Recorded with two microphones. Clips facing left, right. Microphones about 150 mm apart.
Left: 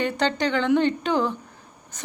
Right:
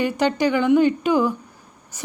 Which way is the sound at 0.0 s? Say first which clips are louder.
Right 4 dB; 10° right (ahead or behind).